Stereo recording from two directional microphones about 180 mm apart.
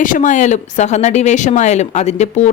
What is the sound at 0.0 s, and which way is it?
A woman's voice, 45° left (ahead or behind).